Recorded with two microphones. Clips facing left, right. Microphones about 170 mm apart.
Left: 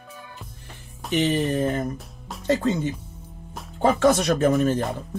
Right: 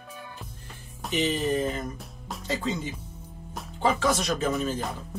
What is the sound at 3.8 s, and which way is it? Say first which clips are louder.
Speech: left 6 dB; 55° left (ahead or behind).